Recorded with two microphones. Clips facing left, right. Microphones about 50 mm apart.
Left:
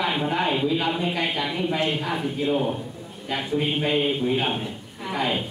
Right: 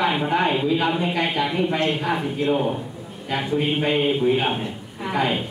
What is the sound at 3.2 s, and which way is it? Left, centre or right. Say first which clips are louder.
A woman's voice: right 3 dB; centre.